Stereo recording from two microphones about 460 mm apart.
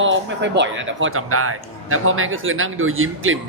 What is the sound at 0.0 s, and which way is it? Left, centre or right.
Speech, right.